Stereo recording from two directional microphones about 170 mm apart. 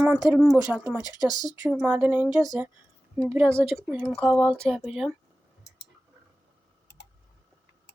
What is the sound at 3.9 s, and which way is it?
Speech, 5° right (ahead or behind).